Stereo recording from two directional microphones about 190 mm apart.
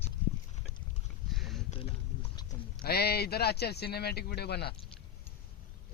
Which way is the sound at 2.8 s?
55° left (ahead or behind).